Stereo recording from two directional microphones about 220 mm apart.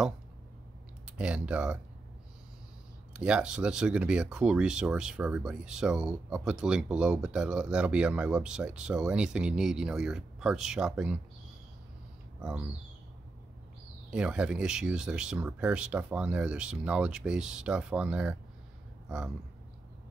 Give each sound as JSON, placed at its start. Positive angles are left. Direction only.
{"t": 1.1, "sound": "speech", "side_deg": -5}
{"t": 3.1, "sound": "speech", "side_deg": -5}
{"t": 12.4, "sound": "speech", "side_deg": -5}
{"t": 14.1, "sound": "speech", "side_deg": -5}